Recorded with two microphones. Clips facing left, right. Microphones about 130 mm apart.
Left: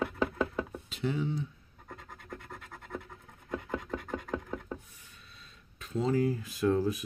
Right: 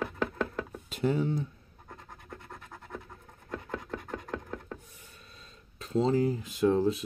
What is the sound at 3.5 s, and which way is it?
Chopping, 10° left (ahead or behind).